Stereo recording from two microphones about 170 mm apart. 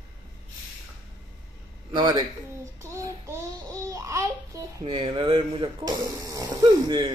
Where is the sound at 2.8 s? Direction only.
15° right (ahead or behind).